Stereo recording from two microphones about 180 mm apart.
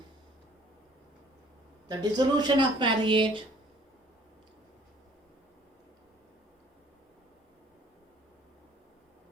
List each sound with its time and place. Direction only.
1.9 s speech: 25° right (ahead or behind)